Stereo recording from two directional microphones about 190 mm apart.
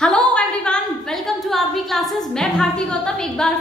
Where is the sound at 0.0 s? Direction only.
5° left (ahead or behind).